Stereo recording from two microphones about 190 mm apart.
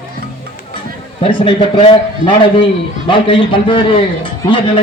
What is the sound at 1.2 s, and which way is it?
A man's voice, 25° left (ahead or behind).